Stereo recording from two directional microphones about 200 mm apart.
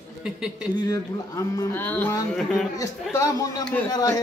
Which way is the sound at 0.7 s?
20° left (ahead or behind).